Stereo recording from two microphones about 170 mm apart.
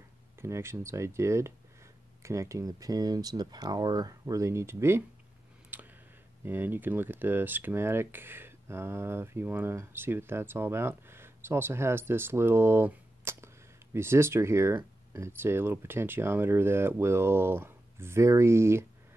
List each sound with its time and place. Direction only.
0.4 s speech: 15° right (ahead or behind)
5.7 s clicking: 10° right (ahead or behind)
6.4 s speech: 10° right (ahead or behind)